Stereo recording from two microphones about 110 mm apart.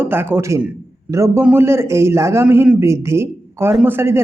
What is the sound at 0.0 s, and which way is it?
A man's voice, 20° right (ahead or behind).